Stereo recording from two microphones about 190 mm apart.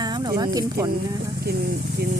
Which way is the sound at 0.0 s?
20° right (ahead or behind).